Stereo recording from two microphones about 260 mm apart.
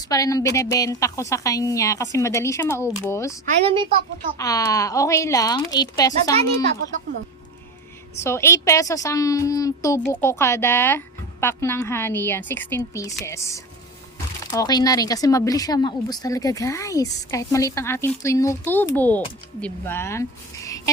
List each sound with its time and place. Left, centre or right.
0.1 s a woman's voice: centre
3.4 s a woman's voice: right
4.4 s a woman's voice: centre
8.2 s a woman's voice: centre